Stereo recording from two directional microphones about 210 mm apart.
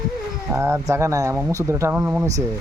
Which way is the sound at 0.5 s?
10° right (ahead or behind).